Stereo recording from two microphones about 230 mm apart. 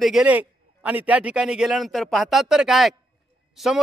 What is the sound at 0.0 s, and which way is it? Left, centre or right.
A man's voice, centre.